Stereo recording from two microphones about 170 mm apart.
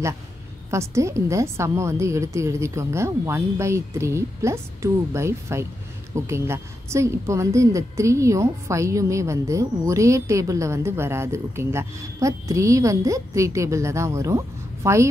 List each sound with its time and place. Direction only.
0.7 s a woman's voice: 15° right (ahead or behind)